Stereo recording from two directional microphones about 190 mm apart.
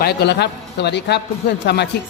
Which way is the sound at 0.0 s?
60° left (ahead or behind).